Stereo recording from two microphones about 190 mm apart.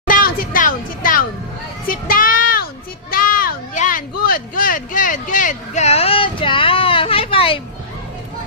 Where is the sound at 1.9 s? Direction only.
45° left (ahead or behind); by 7.6 s 30° left (ahead or behind).